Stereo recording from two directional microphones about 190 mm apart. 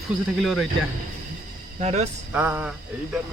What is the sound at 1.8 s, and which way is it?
Speech, 35° right (ahead or behind).